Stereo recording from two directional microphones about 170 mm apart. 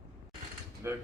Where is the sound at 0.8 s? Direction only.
15° right (ahead or behind).